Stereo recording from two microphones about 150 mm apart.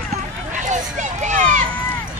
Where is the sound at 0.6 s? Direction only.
55° right (ahead or behind).